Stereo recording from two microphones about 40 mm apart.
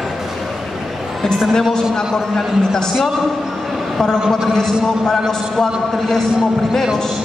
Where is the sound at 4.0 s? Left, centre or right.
Centre.